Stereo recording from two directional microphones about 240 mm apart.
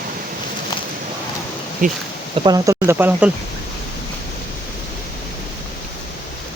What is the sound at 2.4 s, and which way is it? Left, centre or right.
Speech, centre.